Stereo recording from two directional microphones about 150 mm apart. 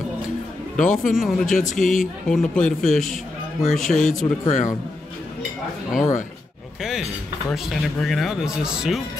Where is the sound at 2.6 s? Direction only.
60° left (ahead or behind).